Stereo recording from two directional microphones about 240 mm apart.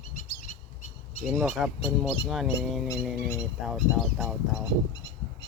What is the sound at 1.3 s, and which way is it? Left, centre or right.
Speech, centre.